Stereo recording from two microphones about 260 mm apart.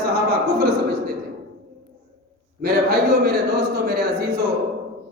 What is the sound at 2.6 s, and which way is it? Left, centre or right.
Speech, right.